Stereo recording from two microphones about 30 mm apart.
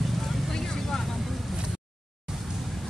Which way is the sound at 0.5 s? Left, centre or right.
Centre.